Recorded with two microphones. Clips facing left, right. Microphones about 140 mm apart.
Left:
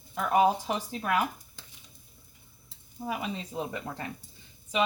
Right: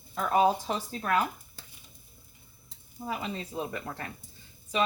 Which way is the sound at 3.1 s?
15° left (ahead or behind).